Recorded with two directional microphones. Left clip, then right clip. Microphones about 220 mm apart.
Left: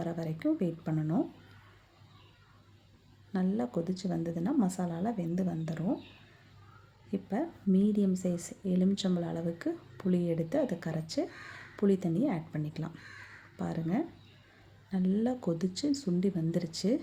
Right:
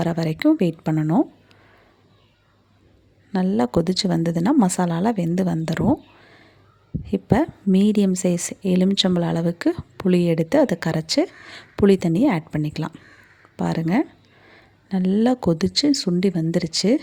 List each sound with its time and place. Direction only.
0.0 s a woman's voice: 40° right (ahead or behind)
3.3 s a woman's voice: 40° right (ahead or behind)
7.1 s a woman's voice: 45° right (ahead or behind)